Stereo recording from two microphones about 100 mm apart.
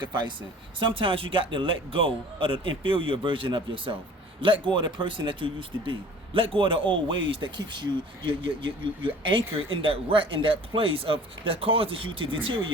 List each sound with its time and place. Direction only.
0.0 s speech: 50° right (ahead or behind)